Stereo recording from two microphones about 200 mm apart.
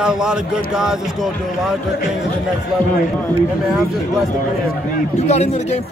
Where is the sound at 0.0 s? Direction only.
5° right (ahead or behind).